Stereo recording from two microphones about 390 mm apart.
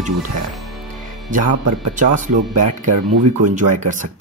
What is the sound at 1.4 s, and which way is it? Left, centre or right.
Speech, right.